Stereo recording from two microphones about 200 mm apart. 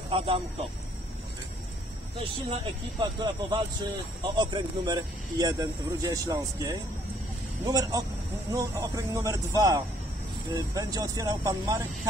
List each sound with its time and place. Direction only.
0.1 s speech: 25° right (ahead or behind)
2.5 s speech: 20° right (ahead or behind)